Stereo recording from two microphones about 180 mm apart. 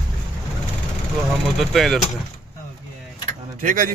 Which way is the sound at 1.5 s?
Centre (ahead or behind).